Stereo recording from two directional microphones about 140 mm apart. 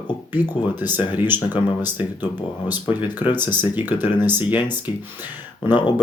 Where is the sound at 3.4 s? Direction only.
15° right (ahead or behind).